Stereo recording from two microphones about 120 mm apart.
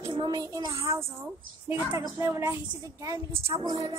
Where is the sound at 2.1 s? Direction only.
25° right (ahead or behind).